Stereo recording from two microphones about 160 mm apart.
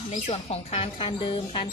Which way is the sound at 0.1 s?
40° left (ahead or behind).